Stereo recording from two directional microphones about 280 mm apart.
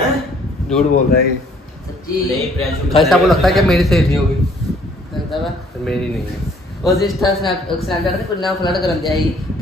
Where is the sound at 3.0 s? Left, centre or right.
Centre.